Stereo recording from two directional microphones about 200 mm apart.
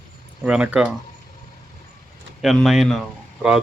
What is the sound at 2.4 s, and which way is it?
Speech, centre (ahead or behind).